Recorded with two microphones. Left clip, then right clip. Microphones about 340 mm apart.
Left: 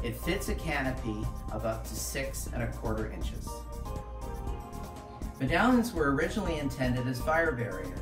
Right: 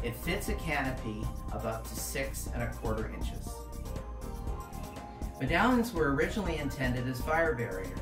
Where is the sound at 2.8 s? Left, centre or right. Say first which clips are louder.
Even; centre.